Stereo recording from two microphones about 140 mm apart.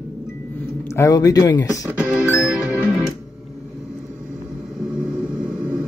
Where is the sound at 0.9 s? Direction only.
20° left (ahead or behind).